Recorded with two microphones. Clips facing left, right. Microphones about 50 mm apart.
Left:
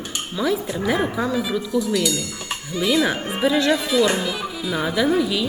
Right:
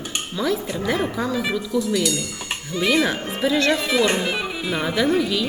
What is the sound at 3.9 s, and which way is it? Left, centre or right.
Speech, right.